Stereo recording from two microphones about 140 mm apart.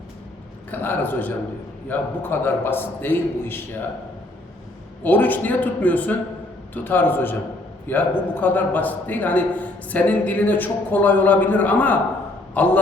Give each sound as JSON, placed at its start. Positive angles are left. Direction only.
{"t": 0.7, "sound": "a man's voice", "side_deg": 15}
{"t": 5.0, "sound": "a man's voice", "side_deg": 15}